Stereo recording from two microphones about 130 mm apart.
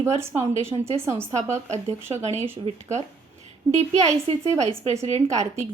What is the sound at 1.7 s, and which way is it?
Speech, 60° right (ahead or behind).